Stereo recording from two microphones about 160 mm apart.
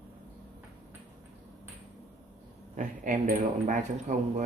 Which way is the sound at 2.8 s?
50° right (ahead or behind).